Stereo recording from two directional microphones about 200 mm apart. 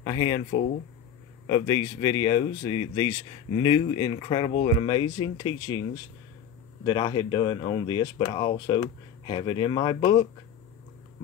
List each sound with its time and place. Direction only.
0.0 s speech: 25° left (ahead or behind)
1.5 s speech: 25° left (ahead or behind)